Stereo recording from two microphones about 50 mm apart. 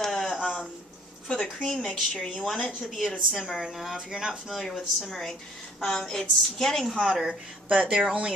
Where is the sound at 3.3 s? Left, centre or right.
Centre.